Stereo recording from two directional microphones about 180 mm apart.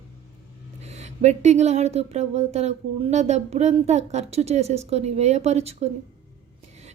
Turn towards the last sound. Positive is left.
turn(degrees=-35)  # may be behind; listen again after turning